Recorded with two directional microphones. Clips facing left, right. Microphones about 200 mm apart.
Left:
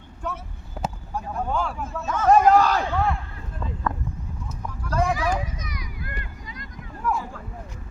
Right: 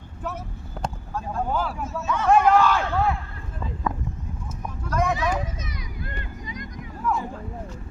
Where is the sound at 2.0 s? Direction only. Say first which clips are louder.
Left 2 dB; 40° left (ahead or behind).